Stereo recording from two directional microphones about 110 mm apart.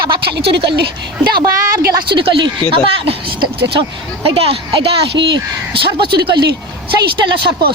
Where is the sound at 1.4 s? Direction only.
40° right (ahead or behind).